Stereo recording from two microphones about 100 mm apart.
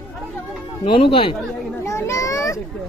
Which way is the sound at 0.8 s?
65° left (ahead or behind).